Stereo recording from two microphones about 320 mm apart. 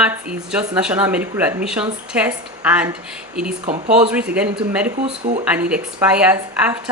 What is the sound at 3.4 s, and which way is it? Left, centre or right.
Speech, right.